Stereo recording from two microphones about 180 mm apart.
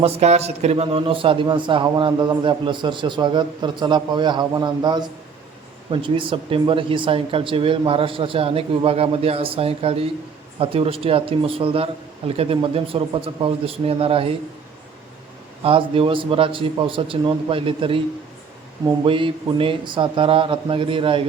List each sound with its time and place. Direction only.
0.0 s a man's voice: 35° right (ahead or behind)
15.6 s a man's voice: 30° right (ahead or behind)
19.0 s a man's voice: 30° right (ahead or behind)